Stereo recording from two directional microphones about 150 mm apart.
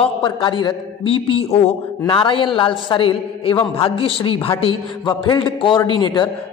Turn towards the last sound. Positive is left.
turn(degrees=30)  # may be behind; listen again after turning